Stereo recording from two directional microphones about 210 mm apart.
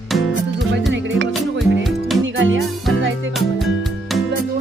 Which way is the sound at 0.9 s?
60° right (ahead or behind).